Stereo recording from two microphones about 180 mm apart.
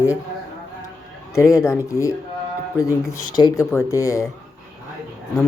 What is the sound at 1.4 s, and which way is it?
Speech, 15° left (ahead or behind).